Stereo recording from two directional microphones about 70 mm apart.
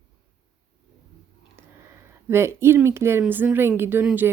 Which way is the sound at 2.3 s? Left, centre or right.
Right.